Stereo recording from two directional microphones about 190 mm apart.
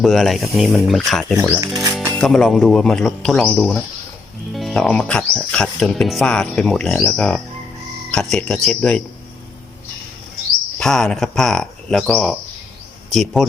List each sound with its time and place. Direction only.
0.0 s speech: centre (ahead or behind)
1.6 s speech: 20° right (ahead or behind)
1.9 s speech: 5° left (ahead or behind)
10.8 s speech: 5° left (ahead or behind)